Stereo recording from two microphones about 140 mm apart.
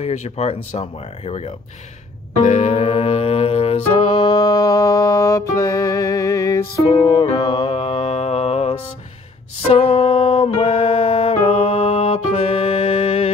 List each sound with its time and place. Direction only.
0.0 s speech: 50° left (ahead or behind)
2.4 s music: 50° left (ahead or behind)
4.3 s music: 25° left (ahead or behind); by 13.3 s 50° left (ahead or behind)